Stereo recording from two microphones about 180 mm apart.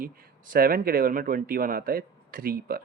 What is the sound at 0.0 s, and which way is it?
Speech, 50° right (ahead or behind).